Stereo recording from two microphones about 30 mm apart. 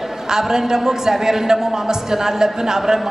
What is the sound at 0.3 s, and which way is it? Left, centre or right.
A man's voice, centre.